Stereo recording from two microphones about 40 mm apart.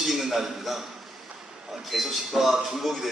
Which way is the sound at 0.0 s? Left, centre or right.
Centre.